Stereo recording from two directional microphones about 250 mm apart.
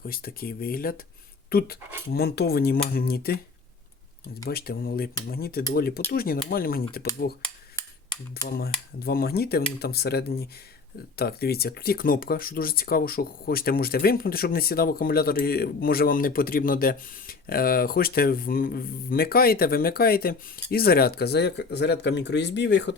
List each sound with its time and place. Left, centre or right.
0.0 s speech: left
4.4 s speech: left
8.5 s speech: left